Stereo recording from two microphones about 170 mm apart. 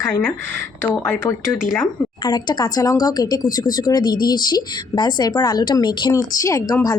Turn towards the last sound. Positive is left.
turn(degrees=20)  # may be behind; listen again after turning